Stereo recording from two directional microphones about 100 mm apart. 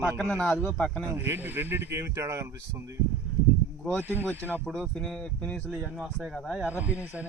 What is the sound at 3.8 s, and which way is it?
Speech, 5° left (ahead or behind).